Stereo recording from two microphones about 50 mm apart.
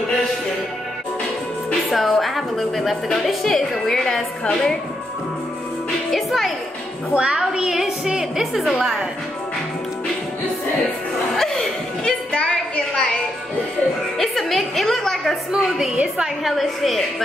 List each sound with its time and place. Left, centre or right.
1.9 s a woman's voice: centre
6.1 s a woman's voice: centre
7.2 s a woman's voice: centre
11.3 s a sound: centre
12.0 s a sound: left
14.1 s music: centre
16.4 s a woman's voice: centre